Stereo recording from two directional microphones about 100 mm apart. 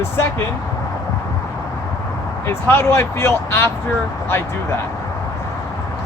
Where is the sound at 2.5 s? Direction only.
25° left (ahead or behind).